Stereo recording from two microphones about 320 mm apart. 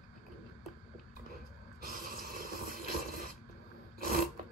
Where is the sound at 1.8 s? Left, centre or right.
Right.